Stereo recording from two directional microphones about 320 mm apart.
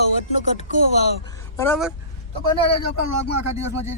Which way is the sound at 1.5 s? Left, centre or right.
Centre.